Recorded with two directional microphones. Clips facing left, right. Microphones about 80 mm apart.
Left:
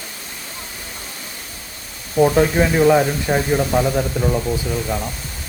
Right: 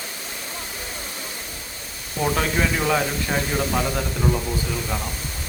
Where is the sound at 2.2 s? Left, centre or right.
Left.